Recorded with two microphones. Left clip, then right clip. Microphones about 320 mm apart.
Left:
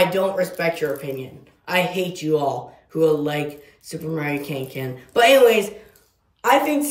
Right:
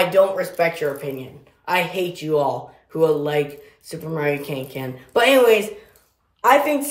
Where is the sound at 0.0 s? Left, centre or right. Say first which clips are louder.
Right 2 dB; centre.